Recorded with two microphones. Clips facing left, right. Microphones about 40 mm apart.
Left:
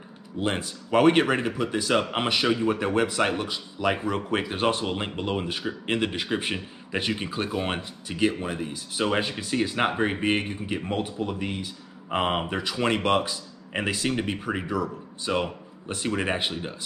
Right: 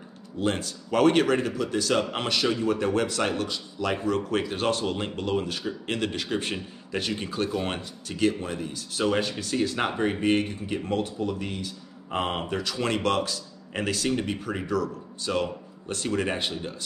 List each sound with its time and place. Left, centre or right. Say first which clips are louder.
0.4 s speech: even; centre